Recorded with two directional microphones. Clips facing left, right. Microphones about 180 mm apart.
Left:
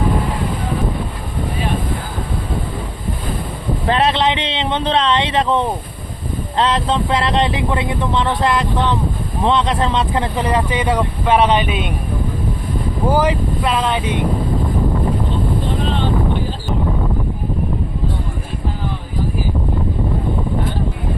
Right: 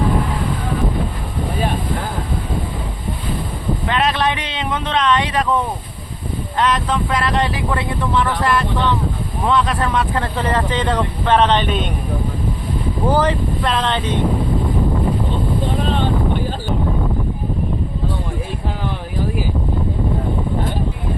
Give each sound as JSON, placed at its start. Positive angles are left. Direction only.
{"t": 3.8, "sound": "speech", "side_deg": 30}
{"t": 13.1, "sound": "speech", "side_deg": 10}